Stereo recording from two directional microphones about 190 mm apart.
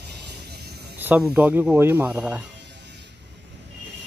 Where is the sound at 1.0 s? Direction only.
10° right (ahead or behind).